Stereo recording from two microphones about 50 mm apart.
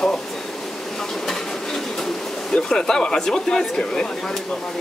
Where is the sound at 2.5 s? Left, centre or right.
Centre.